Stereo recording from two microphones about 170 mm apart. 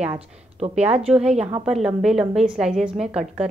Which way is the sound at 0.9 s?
40° right (ahead or behind).